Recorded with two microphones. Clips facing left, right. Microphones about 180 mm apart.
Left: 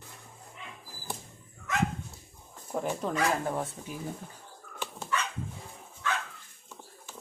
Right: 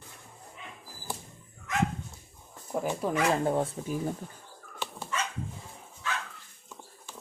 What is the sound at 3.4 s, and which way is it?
Speech, 30° right (ahead or behind).